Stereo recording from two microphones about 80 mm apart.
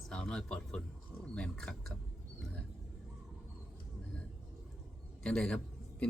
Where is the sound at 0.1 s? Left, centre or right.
Centre.